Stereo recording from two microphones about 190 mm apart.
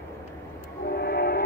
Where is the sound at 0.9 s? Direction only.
55° left (ahead or behind).